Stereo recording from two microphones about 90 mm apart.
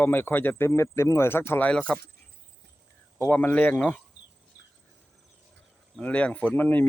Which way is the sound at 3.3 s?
20° left (ahead or behind).